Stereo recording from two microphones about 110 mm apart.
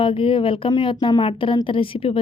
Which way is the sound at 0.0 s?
55° left (ahead or behind).